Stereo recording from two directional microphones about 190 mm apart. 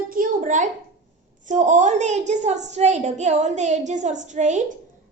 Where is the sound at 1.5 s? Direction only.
40° right (ahead or behind).